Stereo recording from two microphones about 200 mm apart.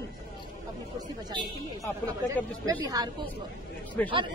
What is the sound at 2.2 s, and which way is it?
Speech, 20° right (ahead or behind).